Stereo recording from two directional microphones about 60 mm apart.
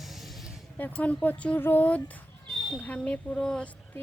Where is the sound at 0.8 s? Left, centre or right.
Left.